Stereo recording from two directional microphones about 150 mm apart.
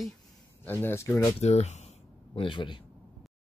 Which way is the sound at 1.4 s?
50° left (ahead or behind).